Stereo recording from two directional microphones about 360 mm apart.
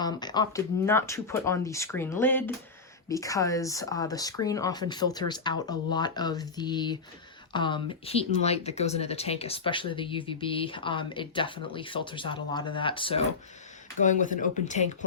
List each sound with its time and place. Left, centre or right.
0.0 s speech: centre